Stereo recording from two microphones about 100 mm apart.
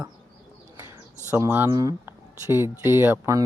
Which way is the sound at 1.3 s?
20° right (ahead or behind).